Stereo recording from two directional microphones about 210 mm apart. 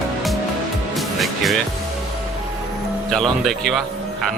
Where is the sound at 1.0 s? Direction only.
Centre (ahead or behind).